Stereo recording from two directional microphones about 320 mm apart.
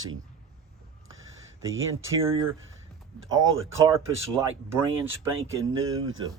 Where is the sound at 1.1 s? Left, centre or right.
Right.